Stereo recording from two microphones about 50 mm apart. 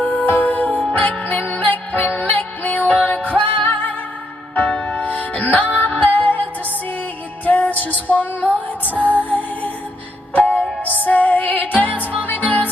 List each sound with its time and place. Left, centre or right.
0.0 s music: left